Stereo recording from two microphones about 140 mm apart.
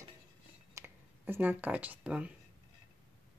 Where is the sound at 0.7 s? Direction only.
15° right (ahead or behind).